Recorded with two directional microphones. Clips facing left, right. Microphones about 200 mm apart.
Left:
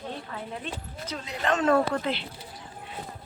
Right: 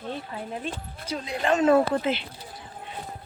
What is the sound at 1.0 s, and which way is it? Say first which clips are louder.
Speech: right 3 dB; 10° right (ahead or behind).